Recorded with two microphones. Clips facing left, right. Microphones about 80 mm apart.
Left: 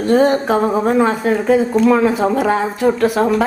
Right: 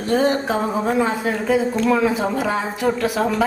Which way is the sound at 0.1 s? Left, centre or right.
Left.